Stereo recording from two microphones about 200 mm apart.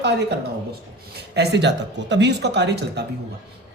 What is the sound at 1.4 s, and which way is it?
Speech, 60° right (ahead or behind).